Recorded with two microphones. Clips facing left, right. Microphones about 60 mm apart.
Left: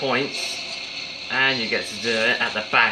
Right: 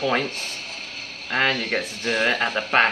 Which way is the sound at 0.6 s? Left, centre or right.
Left.